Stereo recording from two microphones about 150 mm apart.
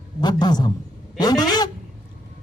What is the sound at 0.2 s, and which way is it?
Speech, 30° left (ahead or behind).